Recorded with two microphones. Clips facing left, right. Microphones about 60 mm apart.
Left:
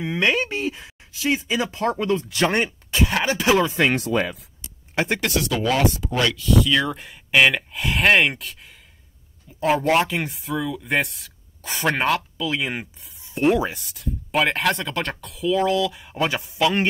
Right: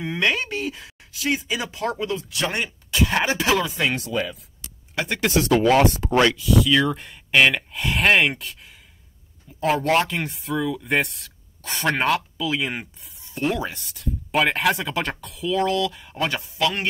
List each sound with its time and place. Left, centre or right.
0.0 s speech: centre; by 2.2 s left
2.3 s speech: left
3.6 s speech: left
3.9 s speech: left
4.9 s speech: left
5.4 s speech: right
6.3 s speech: centre
9.6 s speech: centre
13.3 s speech: centre
13.7 s speech: centre